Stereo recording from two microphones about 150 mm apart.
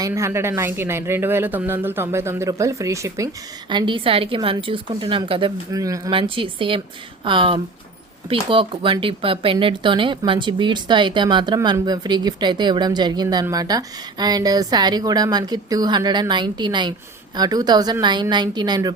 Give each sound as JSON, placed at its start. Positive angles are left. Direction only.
{"t": 0.0, "sound": "speech", "side_deg": -20}
{"t": 3.7, "sound": "a woman's voice", "side_deg": -30}
{"t": 5.7, "sound": "speech", "side_deg": -20}
{"t": 6.1, "sound": "a woman's voice", "side_deg": -35}